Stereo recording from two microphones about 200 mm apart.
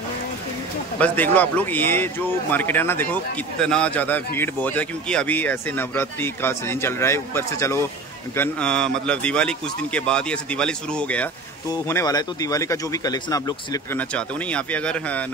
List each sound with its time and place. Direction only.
0.9 s speech: 10° left (ahead or behind)
11.7 s speech: 15° left (ahead or behind)
13.9 s speech: 5° left (ahead or behind)